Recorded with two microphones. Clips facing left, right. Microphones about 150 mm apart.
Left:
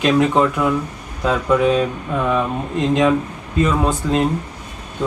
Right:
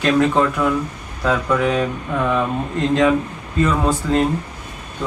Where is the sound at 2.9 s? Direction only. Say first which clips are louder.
Even; 20° left (ahead or behind).